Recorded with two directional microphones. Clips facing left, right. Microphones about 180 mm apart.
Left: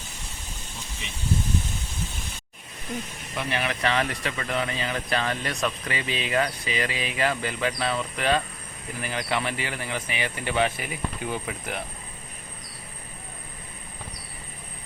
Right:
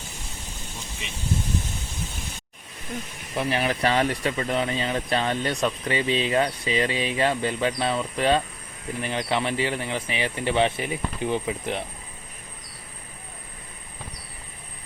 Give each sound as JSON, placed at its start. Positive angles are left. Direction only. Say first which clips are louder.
{"t": 3.3, "sound": "speech", "louder": "right 4 dB", "side_deg": -30}